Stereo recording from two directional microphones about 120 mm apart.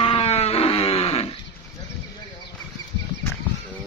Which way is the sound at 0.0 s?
50° left (ahead or behind).